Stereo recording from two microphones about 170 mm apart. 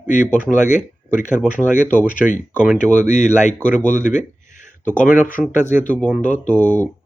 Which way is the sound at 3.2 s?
45° left (ahead or behind).